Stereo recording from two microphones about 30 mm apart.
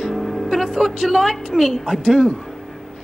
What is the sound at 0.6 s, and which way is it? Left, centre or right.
Speech, centre.